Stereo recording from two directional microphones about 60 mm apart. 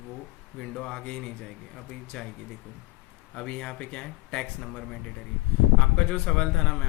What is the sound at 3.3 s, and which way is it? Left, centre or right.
Speech, centre.